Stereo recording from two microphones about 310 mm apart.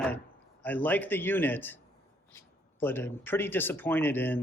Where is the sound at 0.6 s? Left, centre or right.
Centre.